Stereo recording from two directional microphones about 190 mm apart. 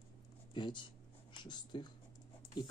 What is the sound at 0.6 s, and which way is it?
Speech, 25° left (ahead or behind).